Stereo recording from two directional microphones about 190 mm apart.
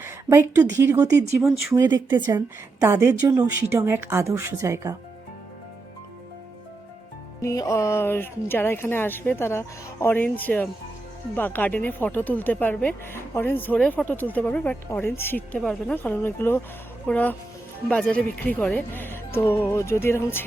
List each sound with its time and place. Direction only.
0.0 s a woman's voice: 15° right (ahead or behind)
7.4 s speech: 15° left (ahead or behind)